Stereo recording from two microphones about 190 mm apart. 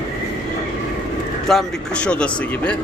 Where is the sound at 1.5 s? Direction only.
5° left (ahead or behind).